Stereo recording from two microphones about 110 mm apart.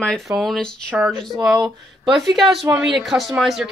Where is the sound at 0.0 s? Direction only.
5° left (ahead or behind).